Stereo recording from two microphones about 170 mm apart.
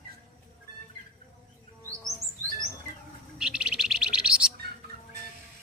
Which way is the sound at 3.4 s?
5° right (ahead or behind).